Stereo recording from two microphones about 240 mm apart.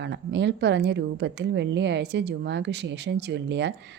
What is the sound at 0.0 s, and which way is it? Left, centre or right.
Speech, right.